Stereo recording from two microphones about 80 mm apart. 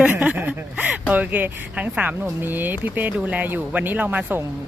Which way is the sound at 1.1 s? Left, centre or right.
Centre.